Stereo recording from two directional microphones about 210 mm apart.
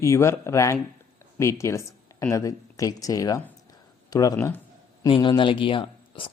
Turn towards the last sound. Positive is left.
turn(degrees=25)  # may be behind; listen again after turning